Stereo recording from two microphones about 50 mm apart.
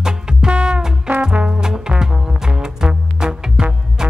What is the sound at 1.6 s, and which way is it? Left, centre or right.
Music, centre.